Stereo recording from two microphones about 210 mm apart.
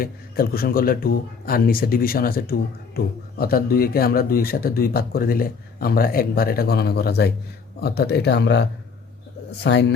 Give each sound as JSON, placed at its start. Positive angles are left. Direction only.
{"t": 0.0, "sound": "a man's voice", "side_deg": 45}